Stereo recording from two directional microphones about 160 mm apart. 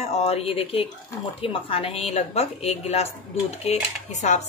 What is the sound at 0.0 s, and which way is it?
Speech, 40° left (ahead or behind).